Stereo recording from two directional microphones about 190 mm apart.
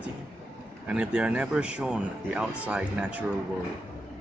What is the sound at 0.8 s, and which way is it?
Speech, 5° right (ahead or behind).